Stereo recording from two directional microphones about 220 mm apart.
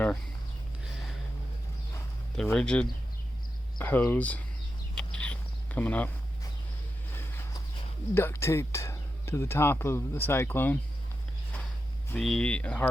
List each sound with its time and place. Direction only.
2.4 s speech: 5° left (ahead or behind)
4.9 s a sound: 5° left (ahead or behind)
7.1 s walk: 10° left (ahead or behind)
8.1 s speech: 10° left (ahead or behind)
12.1 s speech: 5° left (ahead or behind)